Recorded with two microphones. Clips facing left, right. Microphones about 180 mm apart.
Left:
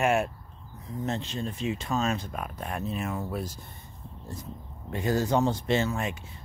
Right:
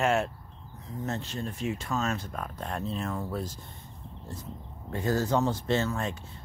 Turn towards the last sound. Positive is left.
turn(degrees=10)  # may be behind; listen again after turning